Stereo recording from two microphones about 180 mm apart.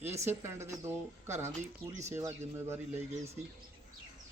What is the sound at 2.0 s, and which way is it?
Speech, 15° right (ahead or behind).